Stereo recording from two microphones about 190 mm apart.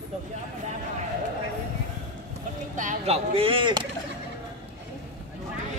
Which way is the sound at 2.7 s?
40° right (ahead or behind).